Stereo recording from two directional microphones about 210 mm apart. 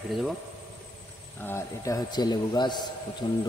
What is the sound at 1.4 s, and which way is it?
A man's voice, 10° left (ahead or behind).